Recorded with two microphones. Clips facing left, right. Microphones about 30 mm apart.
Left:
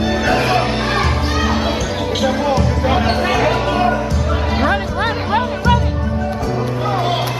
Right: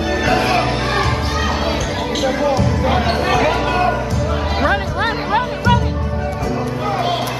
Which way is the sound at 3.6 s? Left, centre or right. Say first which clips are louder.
Left 1 dB; centre.